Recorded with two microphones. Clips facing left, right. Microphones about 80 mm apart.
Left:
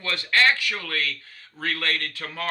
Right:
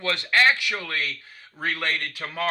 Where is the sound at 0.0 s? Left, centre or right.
Centre.